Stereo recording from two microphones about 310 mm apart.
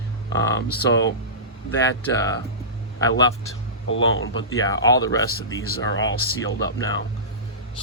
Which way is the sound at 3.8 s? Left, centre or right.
Left.